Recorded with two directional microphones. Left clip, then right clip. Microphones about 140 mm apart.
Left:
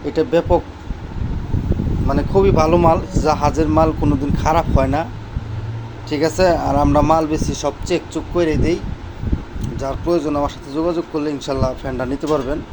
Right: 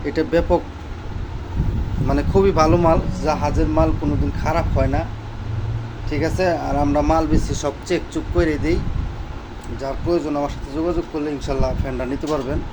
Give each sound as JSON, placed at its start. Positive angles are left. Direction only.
{"t": 0.0, "sound": "speech", "side_deg": 20}
{"t": 2.0, "sound": "speech", "side_deg": 10}
{"t": 2.6, "sound": "speech", "side_deg": 35}
{"t": 2.9, "sound": "speech", "side_deg": 60}
{"t": 6.1, "sound": "speech", "side_deg": 55}
{"t": 7.5, "sound": "speech", "side_deg": 20}
{"t": 9.8, "sound": "speech", "side_deg": 35}